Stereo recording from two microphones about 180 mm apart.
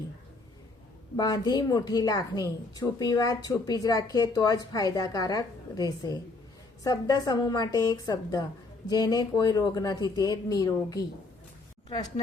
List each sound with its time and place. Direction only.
1.1 s a woman's voice: 20° left (ahead or behind)